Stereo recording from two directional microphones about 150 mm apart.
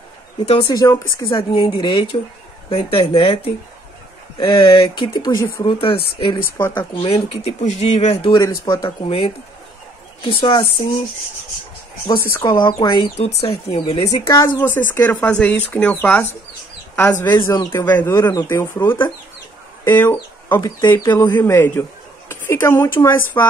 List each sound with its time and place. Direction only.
0.7 s speech: 25° left (ahead or behind)
5.6 s speech: 35° left (ahead or behind)
6.6 s speech: 15° left (ahead or behind)
7.0 s speech: 40° left (ahead or behind)
8.3 s a woman's voice: 25° left (ahead or behind)
9.0 s speech: 40° left (ahead or behind)
10.3 s speech: 30° left (ahead or behind)
12.3 s speech: 15° left (ahead or behind)
12.5 s speech: 30° left (ahead or behind)
14.0 s a woman's voice: 20° left (ahead or behind)